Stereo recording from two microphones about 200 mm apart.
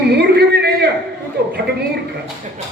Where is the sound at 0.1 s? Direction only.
55° right (ahead or behind).